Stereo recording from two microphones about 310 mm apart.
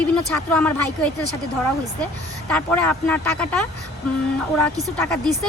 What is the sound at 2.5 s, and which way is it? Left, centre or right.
Speech, centre.